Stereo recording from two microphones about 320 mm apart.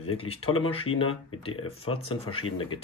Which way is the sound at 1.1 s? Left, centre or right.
Left.